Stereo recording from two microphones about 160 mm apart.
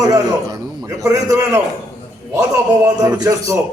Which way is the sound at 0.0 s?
20° right (ahead or behind).